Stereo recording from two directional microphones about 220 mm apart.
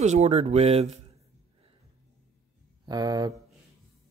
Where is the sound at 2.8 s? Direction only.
15° right (ahead or behind).